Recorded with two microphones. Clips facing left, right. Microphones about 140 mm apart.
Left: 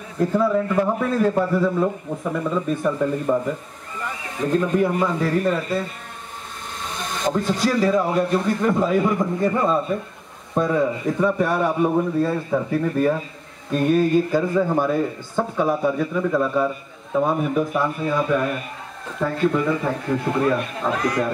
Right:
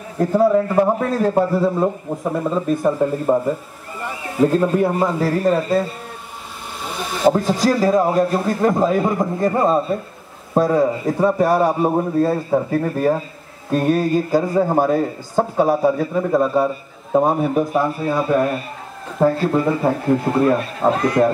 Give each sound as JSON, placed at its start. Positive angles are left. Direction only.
{"t": 0.2, "sound": "a man's voice", "side_deg": -35}
{"t": 6.8, "sound": "a sound", "side_deg": -5}
{"t": 7.3, "sound": "a man's voice", "side_deg": -40}